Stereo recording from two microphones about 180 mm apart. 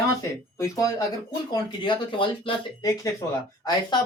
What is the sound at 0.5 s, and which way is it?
Speech, 15° left (ahead or behind).